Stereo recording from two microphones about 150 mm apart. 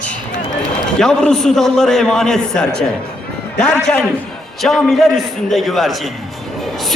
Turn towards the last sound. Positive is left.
turn(degrees=0)  # may be behind; listen again after turning